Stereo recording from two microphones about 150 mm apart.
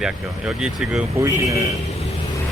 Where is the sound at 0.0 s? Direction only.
5° right (ahead or behind).